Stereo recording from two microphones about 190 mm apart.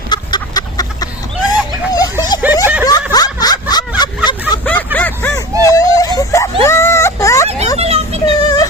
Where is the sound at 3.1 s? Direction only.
20° left (ahead or behind).